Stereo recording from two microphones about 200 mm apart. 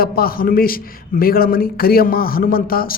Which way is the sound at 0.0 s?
50° left (ahead or behind).